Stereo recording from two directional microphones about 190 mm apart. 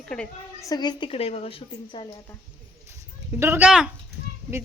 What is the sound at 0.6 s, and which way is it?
A woman's voice, 20° left (ahead or behind).